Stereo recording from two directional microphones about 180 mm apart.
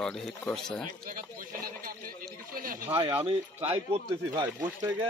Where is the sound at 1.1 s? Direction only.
50° right (ahead or behind).